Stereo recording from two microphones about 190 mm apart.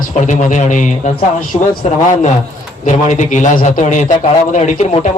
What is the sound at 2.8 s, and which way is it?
A man's voice, 40° left (ahead or behind).